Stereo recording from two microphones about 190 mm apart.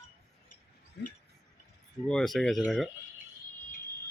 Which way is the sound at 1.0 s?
65° left (ahead or behind).